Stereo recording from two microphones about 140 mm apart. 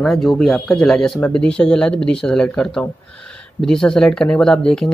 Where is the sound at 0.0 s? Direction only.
Centre (ahead or behind).